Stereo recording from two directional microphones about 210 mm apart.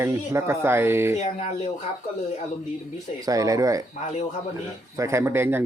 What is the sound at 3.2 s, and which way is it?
Speech, 15° right (ahead or behind).